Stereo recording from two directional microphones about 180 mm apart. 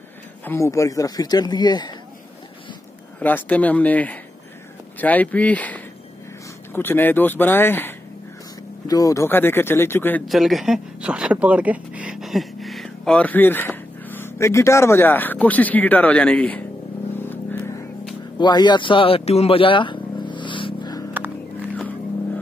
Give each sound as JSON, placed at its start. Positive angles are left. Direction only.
{"t": 0.5, "sound": "speech", "side_deg": 15}
{"t": 3.2, "sound": "speech", "side_deg": 10}
{"t": 10.2, "sound": "speech", "side_deg": 0}
{"t": 17.2, "sound": "vehicle", "side_deg": 10}
{"t": 18.4, "sound": "a sound", "side_deg": 25}